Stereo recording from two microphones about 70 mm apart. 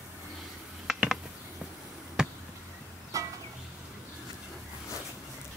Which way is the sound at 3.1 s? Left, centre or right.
Right.